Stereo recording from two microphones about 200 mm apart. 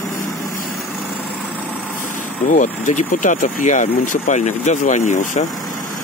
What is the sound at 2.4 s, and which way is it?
Speech, 40° left (ahead or behind).